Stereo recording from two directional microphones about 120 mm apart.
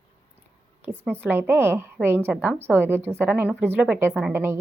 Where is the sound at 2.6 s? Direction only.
20° right (ahead or behind).